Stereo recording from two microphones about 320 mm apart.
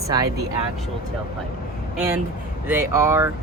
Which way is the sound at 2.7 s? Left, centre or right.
Centre.